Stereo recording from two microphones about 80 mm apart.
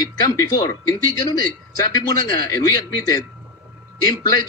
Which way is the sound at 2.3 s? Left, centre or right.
Left.